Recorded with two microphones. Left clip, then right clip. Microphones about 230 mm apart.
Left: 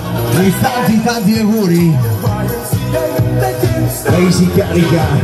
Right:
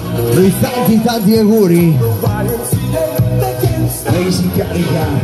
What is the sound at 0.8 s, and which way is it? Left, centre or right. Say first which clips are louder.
Speech: right 1 dB; right.